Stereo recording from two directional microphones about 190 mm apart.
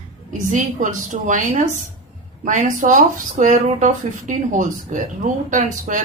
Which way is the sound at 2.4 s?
40° right (ahead or behind).